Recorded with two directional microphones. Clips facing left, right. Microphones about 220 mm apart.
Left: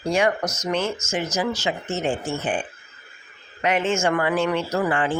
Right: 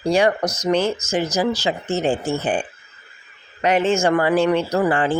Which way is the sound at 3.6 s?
35° right (ahead or behind).